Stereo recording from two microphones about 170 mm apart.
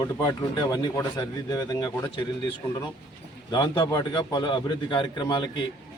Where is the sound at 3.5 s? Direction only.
25° left (ahead or behind).